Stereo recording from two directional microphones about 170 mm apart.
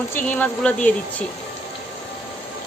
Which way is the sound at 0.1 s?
10° left (ahead or behind).